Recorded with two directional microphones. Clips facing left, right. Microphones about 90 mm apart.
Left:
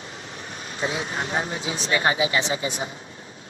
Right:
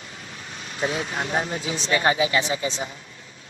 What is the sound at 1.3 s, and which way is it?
Speech, 35° right (ahead or behind).